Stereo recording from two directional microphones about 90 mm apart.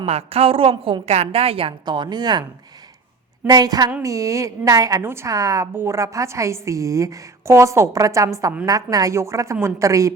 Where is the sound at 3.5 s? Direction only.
45° right (ahead or behind).